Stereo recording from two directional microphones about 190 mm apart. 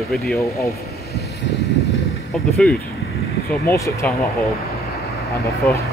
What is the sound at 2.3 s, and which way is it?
Speech, centre (ahead or behind).